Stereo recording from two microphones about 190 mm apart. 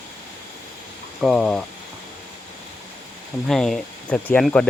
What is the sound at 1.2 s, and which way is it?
Speech, centre (ahead or behind).